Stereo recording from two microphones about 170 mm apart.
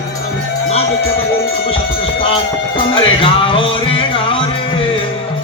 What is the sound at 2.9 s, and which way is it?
Music, 30° left (ahead or behind).